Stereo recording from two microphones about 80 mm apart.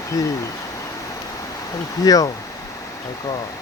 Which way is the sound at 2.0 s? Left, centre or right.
Left.